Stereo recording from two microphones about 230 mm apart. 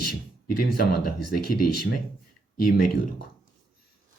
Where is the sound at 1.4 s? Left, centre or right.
Left.